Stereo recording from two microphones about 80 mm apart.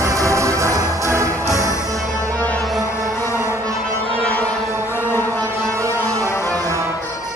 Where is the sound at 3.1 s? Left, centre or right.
Left.